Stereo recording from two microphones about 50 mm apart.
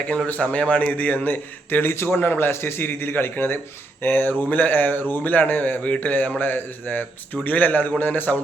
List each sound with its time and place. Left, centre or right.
0.3 s a man's voice: left